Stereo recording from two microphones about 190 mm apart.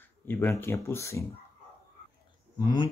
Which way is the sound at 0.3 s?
10° left (ahead or behind).